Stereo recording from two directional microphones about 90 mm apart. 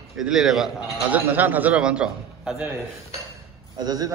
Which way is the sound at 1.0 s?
20° right (ahead or behind).